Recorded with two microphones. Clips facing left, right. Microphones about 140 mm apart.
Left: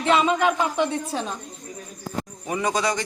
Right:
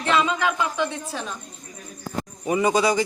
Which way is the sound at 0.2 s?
20° left (ahead or behind).